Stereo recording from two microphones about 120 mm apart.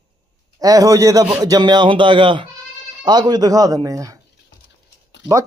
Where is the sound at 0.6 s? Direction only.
30° right (ahead or behind).